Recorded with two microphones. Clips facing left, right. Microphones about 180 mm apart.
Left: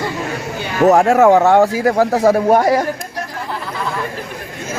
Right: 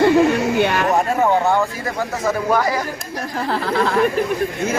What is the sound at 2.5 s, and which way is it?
Speech, 50° left (ahead or behind).